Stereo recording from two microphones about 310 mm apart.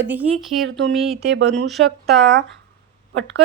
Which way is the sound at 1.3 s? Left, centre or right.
Right.